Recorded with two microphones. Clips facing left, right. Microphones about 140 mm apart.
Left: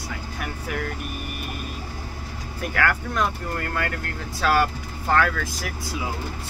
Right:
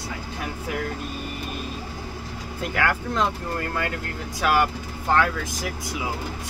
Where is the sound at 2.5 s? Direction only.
20° right (ahead or behind).